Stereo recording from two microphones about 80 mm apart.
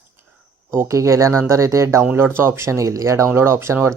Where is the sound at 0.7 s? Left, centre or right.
Right.